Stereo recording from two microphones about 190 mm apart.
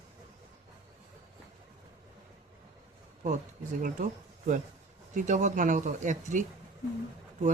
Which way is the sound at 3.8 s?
40° right (ahead or behind).